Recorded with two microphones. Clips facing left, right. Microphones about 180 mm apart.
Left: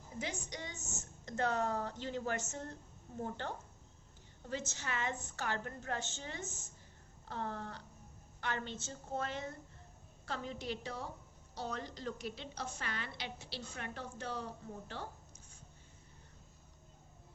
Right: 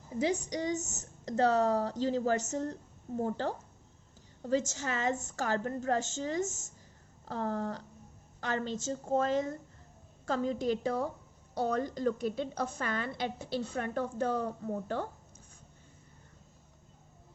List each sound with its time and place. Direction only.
0.5 s a woman's voice: 35° right (ahead or behind)